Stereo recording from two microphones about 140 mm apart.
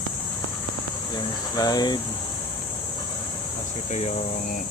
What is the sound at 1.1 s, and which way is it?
Speech, 30° left (ahead or behind).